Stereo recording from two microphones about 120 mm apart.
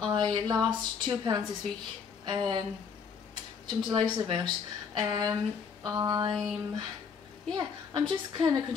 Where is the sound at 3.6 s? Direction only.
40° right (ahead or behind).